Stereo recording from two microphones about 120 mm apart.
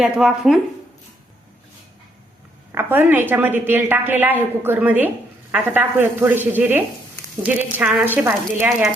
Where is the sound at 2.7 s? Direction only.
15° right (ahead or behind).